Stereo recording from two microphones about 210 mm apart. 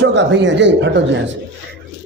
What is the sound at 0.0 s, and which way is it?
A man's voice, 55° right (ahead or behind).